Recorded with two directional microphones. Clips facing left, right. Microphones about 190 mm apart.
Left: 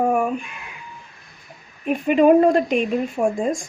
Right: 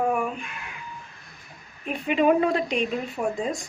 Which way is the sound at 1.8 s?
50° left (ahead or behind).